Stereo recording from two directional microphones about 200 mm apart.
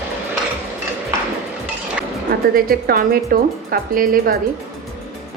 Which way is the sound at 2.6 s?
45° right (ahead or behind).